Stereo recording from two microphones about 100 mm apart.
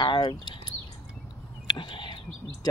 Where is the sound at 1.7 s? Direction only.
55° left (ahead or behind).